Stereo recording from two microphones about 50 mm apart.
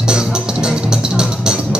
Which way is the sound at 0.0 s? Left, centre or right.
Centre.